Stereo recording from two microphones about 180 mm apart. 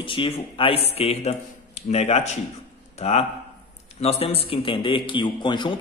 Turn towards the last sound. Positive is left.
turn(degrees=25)  # may be behind; listen again after turning